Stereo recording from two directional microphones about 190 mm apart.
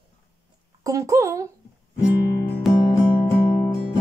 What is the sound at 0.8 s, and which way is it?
Speech, 15° right (ahead or behind).